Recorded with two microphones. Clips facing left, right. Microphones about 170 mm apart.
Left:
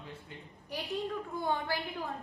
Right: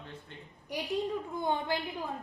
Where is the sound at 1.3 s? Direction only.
20° right (ahead or behind).